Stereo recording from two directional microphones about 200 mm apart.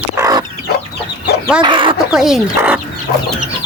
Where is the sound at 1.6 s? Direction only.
25° right (ahead or behind).